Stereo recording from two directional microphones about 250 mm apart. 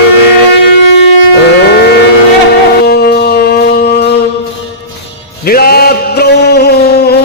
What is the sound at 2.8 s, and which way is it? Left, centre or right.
Shofar, left.